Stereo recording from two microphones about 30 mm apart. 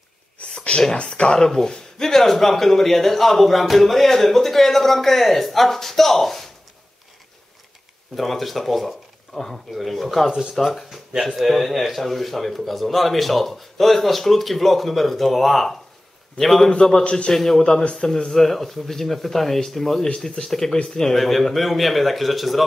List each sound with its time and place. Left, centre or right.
0.6 s a sound: left
0.9 s speech: left
1.4 s speech: centre
8.2 s a man's voice: centre
10.5 s a man's voice: centre; by 21.1 s left
21.1 s a man's voice: centre